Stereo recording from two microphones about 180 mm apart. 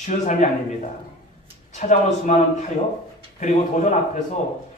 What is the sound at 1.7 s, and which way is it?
Speech, 40° left (ahead or behind).